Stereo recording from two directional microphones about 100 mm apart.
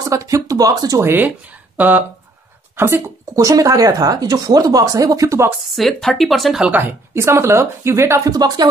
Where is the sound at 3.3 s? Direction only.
35° right (ahead or behind).